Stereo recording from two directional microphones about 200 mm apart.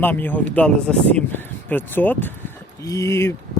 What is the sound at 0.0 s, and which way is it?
Speech, 10° left (ahead or behind).